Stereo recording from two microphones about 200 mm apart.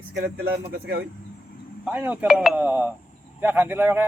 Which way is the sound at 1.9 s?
10° right (ahead or behind).